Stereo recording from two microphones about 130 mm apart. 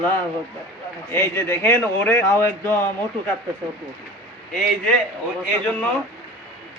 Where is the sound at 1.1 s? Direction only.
20° left (ahead or behind).